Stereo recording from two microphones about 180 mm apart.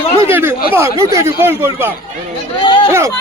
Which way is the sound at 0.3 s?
10° right (ahead or behind).